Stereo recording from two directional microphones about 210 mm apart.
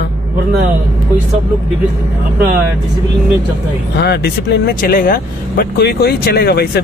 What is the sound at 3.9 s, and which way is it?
Speech, 50° left (ahead or behind).